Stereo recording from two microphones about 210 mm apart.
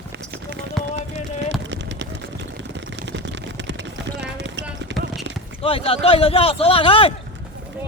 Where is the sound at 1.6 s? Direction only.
60° right (ahead or behind).